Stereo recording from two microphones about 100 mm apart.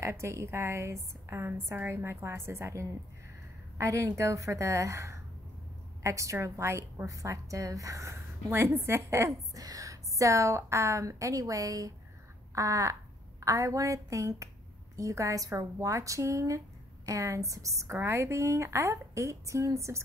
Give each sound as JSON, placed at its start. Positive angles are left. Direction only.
{"t": 0.0, "sound": "a woman's voice", "side_deg": -25}